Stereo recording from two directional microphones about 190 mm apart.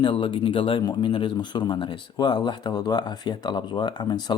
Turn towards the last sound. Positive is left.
turn(degrees=20)  # may be behind; listen again after turning